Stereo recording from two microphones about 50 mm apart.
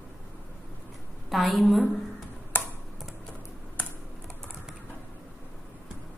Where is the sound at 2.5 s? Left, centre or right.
Left.